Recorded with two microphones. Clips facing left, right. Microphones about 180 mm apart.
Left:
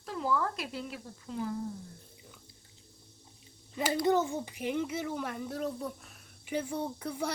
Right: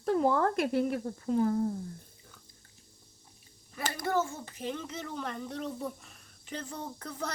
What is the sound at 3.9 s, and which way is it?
Speech, 20° left (ahead or behind).